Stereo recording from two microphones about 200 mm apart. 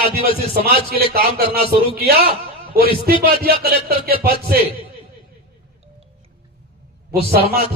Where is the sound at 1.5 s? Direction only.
25° left (ahead or behind).